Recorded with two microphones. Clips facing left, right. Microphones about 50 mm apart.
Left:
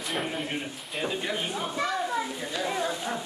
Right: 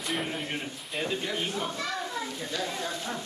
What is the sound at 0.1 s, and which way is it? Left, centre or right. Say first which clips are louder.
A man's voice: left 1 dB; centre.